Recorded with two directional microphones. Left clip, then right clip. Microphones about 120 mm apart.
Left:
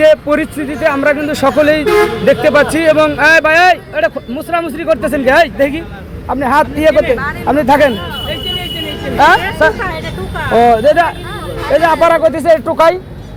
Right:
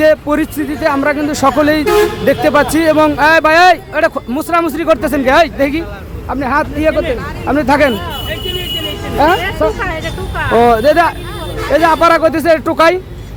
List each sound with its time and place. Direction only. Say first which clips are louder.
0.0 s speech: left 2 dB; 15° right (ahead or behind)
3.4 s speech: right 1 dB; 35° right (ahead or behind)
5.1 s speech: left 3 dB; 20° right (ahead or behind)
6.5 s speech: left 4 dB; centre (ahead or behind)
7.4 s speech: left 2 dB; 15° right (ahead or behind)
9.1 s speech: left 3 dB; 15° right (ahead or behind)
9.4 s speech: left 3 dB; 5° right (ahead or behind)
10.6 s speech: left 1 dB; 35° right (ahead or behind)